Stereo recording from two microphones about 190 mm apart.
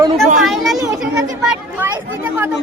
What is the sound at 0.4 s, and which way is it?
Children playing, centre (ahead or behind).